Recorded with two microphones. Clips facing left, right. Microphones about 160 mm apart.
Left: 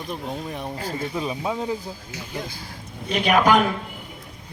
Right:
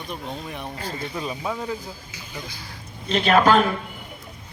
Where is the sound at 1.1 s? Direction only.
15° left (ahead or behind).